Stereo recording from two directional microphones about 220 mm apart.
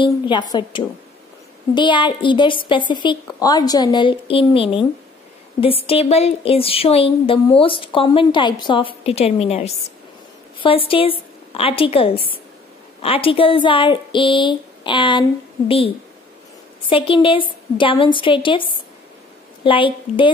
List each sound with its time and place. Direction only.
0.0 s a woman's voice: 20° left (ahead or behind)
16.9 s a woman's voice: 25° left (ahead or behind)